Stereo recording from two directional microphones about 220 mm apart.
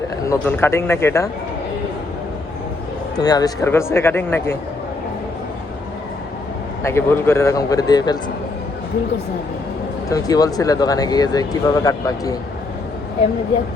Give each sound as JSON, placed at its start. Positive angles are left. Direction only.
{"t": 0.3, "sound": "speech", "side_deg": 10}
{"t": 3.2, "sound": "speech", "side_deg": 15}
{"t": 6.8, "sound": "speech", "side_deg": 10}
{"t": 10.1, "sound": "speech", "side_deg": 15}